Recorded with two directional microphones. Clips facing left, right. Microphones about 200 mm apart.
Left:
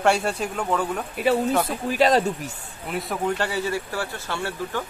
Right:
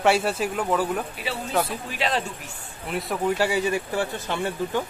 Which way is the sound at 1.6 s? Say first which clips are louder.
Left 8 dB; 40° left (ahead or behind).